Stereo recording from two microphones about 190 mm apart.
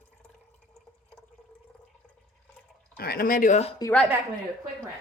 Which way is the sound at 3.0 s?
55° left (ahead or behind).